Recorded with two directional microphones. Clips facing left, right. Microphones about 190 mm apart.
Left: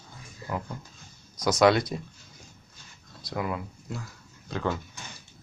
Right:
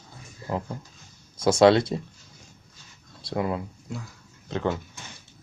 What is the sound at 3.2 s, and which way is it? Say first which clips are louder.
Speech: right 4 dB; 30° right (ahead or behind).